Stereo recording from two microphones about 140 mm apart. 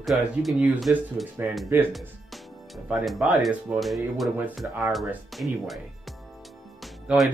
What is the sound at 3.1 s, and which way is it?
Speech, centre (ahead or behind).